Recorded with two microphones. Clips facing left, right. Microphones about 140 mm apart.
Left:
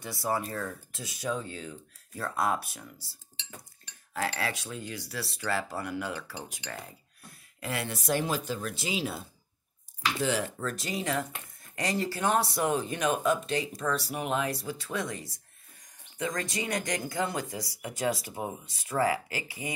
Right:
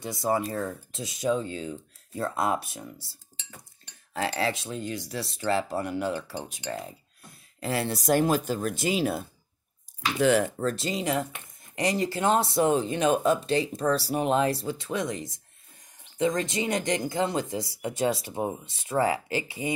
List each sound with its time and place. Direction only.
0.0 s speech: 20° right (ahead or behind)
4.4 s speech: 25° right (ahead or behind)
7.6 s speech: 30° right (ahead or behind); by 9.2 s 50° right (ahead or behind)
10.2 s speech: 55° right (ahead or behind)
10.6 s speech: 30° right (ahead or behind)